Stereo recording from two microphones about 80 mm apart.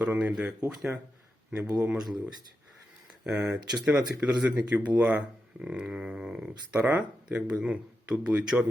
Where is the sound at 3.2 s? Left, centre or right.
Centre.